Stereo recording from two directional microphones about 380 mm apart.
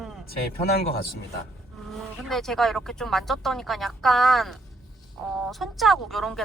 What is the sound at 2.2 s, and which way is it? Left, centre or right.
Speech, centre.